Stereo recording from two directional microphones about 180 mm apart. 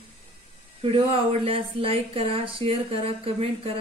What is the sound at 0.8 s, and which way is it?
Speech, 30° right (ahead or behind).